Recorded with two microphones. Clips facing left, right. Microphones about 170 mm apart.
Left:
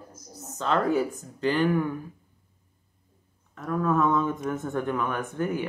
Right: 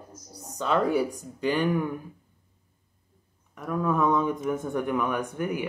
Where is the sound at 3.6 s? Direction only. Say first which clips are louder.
Left 1 dB; 10° right (ahead or behind).